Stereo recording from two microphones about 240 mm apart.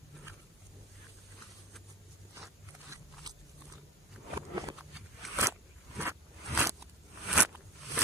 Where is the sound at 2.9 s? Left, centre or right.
Centre.